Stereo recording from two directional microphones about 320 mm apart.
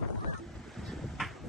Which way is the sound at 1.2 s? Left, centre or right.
Centre.